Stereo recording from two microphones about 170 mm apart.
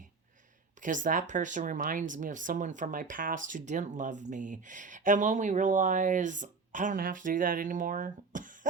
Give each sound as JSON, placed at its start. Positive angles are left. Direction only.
{"t": 0.8, "sound": "speech", "side_deg": -50}